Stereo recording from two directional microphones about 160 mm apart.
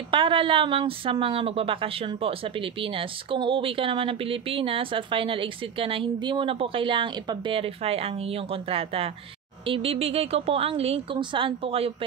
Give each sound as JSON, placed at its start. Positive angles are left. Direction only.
{"t": 0.1, "sound": "a woman's voice", "side_deg": -30}